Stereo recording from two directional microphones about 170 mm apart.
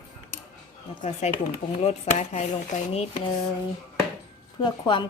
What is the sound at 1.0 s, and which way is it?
Speech, 45° left (ahead or behind).